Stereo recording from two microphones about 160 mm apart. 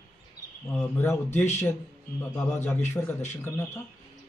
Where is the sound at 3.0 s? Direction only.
15° left (ahead or behind).